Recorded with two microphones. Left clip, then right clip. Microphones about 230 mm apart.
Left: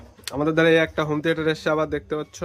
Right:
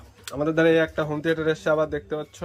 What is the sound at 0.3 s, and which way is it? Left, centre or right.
Speech, centre.